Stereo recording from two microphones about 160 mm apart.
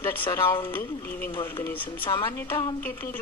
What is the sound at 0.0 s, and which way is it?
Speech, 10° left (ahead or behind).